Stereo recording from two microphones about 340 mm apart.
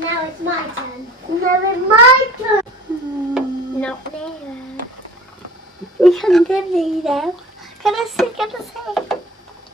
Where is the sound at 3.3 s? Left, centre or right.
Centre.